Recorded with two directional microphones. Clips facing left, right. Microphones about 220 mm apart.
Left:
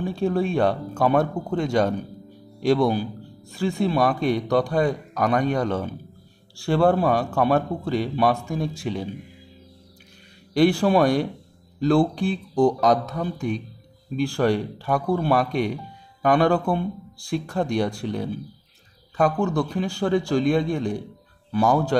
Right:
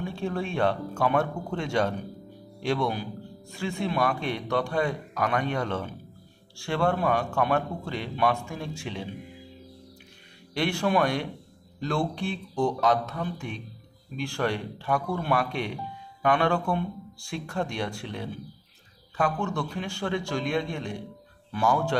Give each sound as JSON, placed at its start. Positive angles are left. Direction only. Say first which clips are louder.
{"t": 0.0, "sound": "a man's voice", "louder": "left 7 dB", "side_deg": 35}
{"t": 10.5, "sound": "a man's voice", "louder": "left 7 dB", "side_deg": 35}